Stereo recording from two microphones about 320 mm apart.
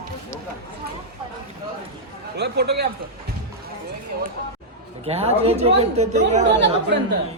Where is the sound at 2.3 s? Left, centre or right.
Right.